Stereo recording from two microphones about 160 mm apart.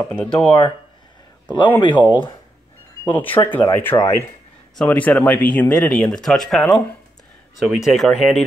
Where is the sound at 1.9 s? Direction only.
10° left (ahead or behind).